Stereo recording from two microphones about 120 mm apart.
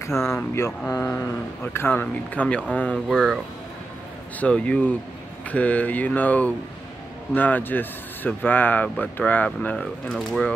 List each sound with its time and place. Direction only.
0.6 s speech: 20° left (ahead or behind); by 3.3 s 5° left (ahead or behind)
4.4 s speech: 10° left (ahead or behind)
10.0 s speech: centre (ahead or behind)